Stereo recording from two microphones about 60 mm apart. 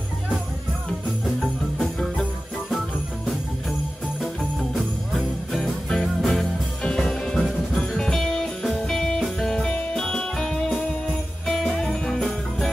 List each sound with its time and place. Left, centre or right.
1.4 s jingle bell: centre
4.7 s music: centre
11.8 s jingle bell: centre